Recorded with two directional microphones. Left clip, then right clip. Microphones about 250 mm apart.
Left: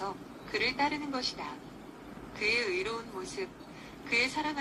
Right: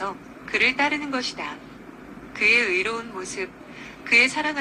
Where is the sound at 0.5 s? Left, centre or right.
Right.